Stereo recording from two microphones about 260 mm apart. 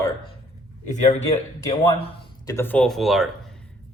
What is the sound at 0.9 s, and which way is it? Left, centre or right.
Speech, left.